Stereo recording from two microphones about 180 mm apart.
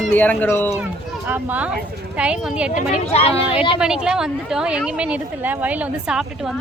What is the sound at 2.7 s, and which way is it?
Speech, 35° left (ahead or behind).